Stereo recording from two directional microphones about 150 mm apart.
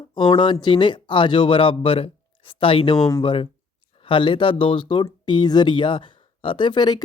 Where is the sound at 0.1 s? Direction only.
35° left (ahead or behind).